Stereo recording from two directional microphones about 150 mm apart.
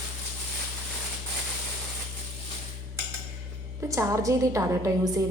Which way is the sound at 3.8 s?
20° right (ahead or behind).